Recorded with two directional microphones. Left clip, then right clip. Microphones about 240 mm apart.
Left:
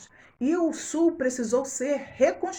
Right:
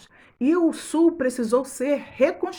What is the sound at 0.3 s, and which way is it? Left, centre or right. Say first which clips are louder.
A woman's voice: right 4 dB; right.